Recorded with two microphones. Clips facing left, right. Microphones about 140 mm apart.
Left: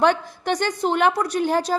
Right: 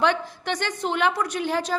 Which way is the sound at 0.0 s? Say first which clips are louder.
Left 4 dB; 45° left (ahead or behind).